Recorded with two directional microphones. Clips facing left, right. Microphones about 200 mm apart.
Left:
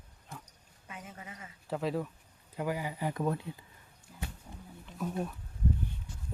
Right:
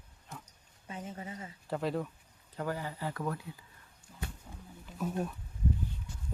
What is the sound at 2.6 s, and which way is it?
Speech, 10° left (ahead or behind).